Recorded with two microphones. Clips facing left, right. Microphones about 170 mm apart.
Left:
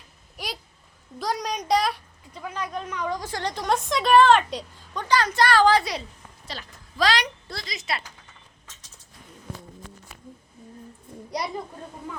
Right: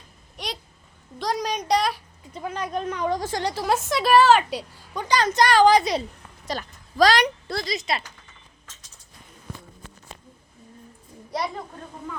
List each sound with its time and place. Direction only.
0.3 s a sound: 5° left (ahead or behind)
1.2 s speech: centre (ahead or behind)
2.4 s speech: 40° right (ahead or behind)
3.3 s a woman's voice: 10° right (ahead or behind)
6.5 s a woman's voice: 45° right (ahead or behind)
11.3 s a sound: centre (ahead or behind)